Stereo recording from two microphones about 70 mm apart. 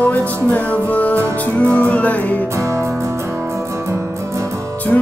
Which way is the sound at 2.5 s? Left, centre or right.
Right.